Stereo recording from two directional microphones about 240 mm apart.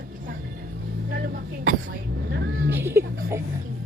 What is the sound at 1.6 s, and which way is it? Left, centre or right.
Vehicle, right.